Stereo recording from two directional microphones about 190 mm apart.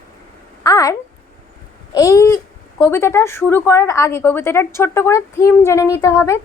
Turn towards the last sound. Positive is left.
turn(degrees=15)  # may be behind; listen again after turning